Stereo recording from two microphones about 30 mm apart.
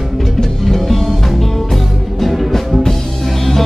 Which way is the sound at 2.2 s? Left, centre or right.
Centre.